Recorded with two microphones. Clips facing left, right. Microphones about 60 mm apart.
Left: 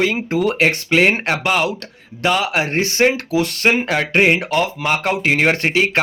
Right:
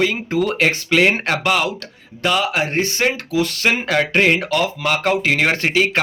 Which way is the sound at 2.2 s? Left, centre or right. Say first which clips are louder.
Left 1 dB; left.